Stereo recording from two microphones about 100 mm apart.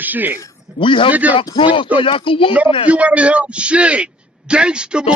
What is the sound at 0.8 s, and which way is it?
Speech, 55° left (ahead or behind).